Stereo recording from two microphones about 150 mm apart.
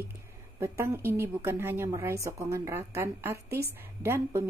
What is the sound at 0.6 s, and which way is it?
A woman's voice, 15° right (ahead or behind).